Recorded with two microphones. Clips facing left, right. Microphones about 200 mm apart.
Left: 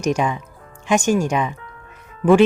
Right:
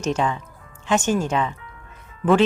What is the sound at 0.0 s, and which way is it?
Speech, 15° left (ahead or behind).